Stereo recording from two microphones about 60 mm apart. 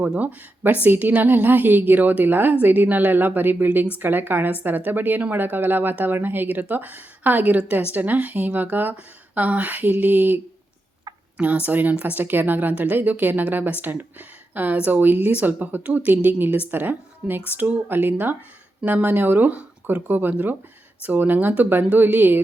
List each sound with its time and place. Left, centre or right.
0.0 s a woman's voice: right